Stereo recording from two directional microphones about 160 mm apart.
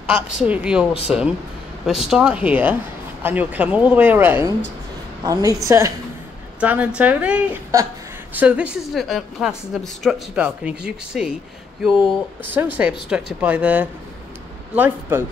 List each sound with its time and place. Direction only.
0.1 s a woman's voice: 5° right (ahead or behind)
6.6 s speech: 10° right (ahead or behind)